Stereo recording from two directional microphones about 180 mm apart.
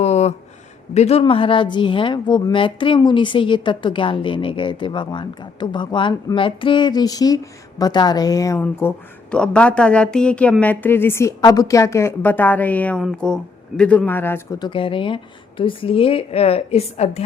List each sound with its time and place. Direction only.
0.0 s a sound: 35° left (ahead or behind)
0.9 s a woman's voice: 35° left (ahead or behind); by 14.4 s 10° left (ahead or behind)
14.6 s speech: 30° left (ahead or behind)